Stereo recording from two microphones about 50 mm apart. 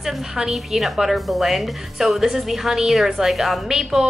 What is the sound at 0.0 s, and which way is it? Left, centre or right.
A woman's voice, centre.